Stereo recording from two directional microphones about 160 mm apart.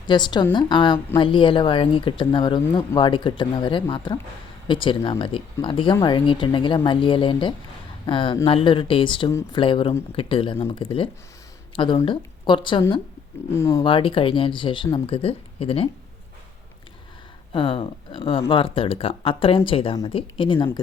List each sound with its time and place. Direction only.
0.1 s a woman's voice: 30° left (ahead or behind)
11.9 s a woman's voice: 30° left (ahead or behind)
13.5 s speech: 15° left (ahead or behind)
13.8 s speech: 30° left (ahead or behind)
17.5 s speech: 35° left (ahead or behind)